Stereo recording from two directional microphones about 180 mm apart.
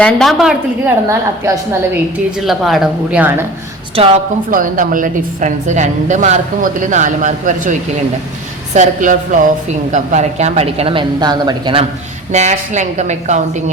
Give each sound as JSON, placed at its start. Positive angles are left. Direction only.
{"t": 0.0, "sound": "a woman's voice", "side_deg": 0}
{"t": 1.0, "sound": "a woman's voice", "side_deg": -15}
{"t": 2.4, "sound": "a woman's voice", "side_deg": 0}
{"t": 3.9, "sound": "a woman's voice", "side_deg": -30}
{"t": 4.5, "sound": "a woman's voice", "side_deg": -50}
{"t": 12.3, "sound": "a woman's voice", "side_deg": -40}